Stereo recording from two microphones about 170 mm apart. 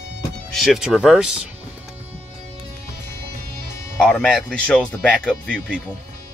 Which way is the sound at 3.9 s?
5° left (ahead or behind).